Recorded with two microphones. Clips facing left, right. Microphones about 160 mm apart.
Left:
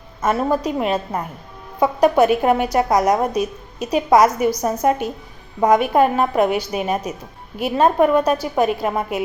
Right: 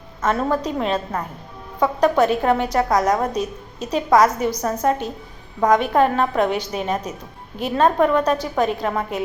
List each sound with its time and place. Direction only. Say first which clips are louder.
0.2 s a woman's voice: left 2 dB; 10° left (ahead or behind)